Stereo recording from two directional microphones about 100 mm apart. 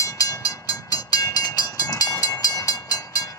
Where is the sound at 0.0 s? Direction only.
35° left (ahead or behind).